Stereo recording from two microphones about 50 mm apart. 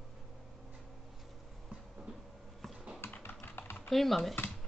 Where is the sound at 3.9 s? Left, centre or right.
Centre.